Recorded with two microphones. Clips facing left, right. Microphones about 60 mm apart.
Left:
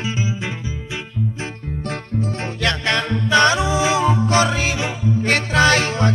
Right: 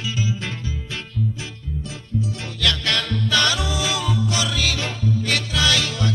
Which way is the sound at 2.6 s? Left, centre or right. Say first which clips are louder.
Left 2 dB; left.